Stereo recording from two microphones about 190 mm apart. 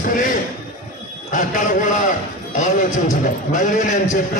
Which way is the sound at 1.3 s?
40° left (ahead or behind).